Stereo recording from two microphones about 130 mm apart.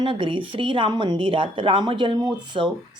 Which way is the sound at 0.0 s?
40° right (ahead or behind).